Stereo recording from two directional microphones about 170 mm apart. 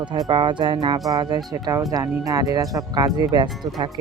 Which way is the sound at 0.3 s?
30° right (ahead or behind).